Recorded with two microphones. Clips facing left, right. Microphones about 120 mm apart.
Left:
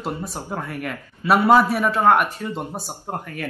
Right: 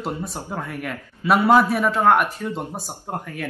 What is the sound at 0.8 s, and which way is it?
Speech, centre (ahead or behind).